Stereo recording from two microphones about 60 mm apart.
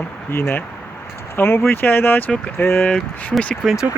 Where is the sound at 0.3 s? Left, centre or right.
Left.